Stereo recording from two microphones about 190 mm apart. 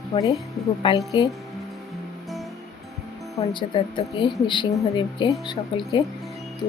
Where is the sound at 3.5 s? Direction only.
25° left (ahead or behind).